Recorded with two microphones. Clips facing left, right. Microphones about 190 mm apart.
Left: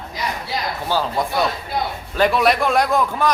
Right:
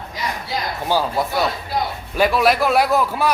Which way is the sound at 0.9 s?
10° right (ahead or behind).